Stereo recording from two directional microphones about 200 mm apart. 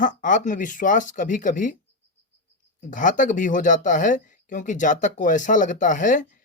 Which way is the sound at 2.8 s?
40° left (ahead or behind).